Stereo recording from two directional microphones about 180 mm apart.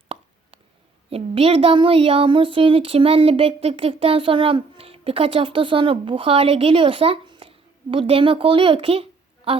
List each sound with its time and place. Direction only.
1.1 s speech: 30° right (ahead or behind)